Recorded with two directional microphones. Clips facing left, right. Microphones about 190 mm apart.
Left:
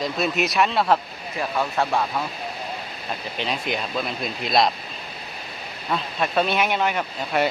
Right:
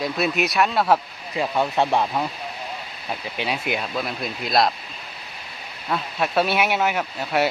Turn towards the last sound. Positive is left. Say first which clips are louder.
# right 1 dB
turn(degrees=-5)  # may be behind; listen again after turning